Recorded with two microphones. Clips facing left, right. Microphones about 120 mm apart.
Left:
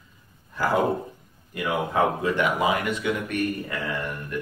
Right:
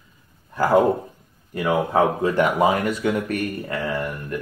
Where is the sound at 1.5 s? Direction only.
40° right (ahead or behind).